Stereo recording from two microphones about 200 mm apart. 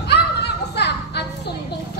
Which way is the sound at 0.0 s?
55° left (ahead or behind).